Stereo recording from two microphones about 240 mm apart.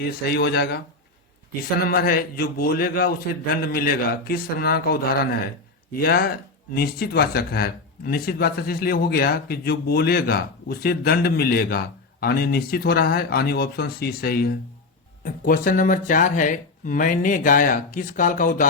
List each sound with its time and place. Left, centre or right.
0.0 s speech: left
1.8 s speech: left